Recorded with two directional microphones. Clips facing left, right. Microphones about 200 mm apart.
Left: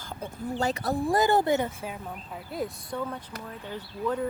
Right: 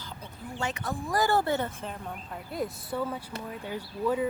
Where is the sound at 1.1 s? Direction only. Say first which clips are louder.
Left 2 dB; 20° left (ahead or behind); by 4.3 s 10° right (ahead or behind).